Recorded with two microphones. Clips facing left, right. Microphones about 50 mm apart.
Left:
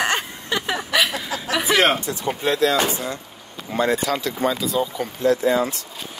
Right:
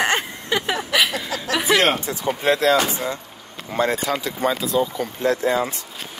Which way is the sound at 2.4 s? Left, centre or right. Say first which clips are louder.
Right 2 dB; right.